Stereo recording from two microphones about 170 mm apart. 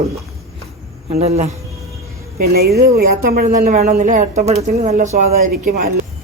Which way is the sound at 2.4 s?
65° right (ahead or behind).